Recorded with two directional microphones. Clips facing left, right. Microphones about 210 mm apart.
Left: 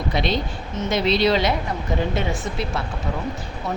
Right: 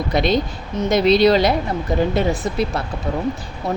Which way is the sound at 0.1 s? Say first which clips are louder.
Right 5 dB; 45° right (ahead or behind).